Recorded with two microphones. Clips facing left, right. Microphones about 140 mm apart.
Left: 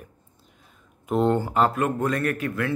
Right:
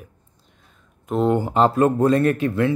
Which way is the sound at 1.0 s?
Centre (ahead or behind).